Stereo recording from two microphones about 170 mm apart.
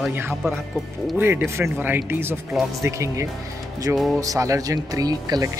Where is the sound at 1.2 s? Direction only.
15° right (ahead or behind).